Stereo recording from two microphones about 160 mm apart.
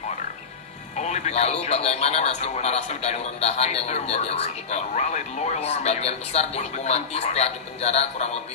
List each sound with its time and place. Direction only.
0.9 s speech: 45° left (ahead or behind)